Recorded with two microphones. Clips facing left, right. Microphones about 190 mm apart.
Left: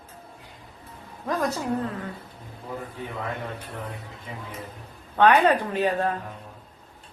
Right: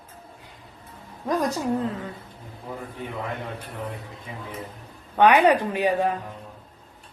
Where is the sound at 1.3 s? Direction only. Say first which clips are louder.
Right 2 dB; 15° right (ahead or behind).